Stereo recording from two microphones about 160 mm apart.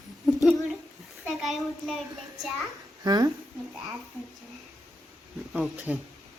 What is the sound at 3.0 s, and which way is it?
Speech, 25° right (ahead or behind).